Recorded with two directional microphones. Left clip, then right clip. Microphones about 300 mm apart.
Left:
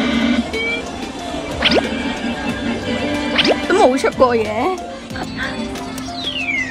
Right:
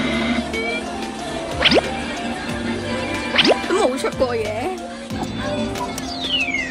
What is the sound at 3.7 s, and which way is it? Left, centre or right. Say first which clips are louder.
Speech: left 6 dB; left.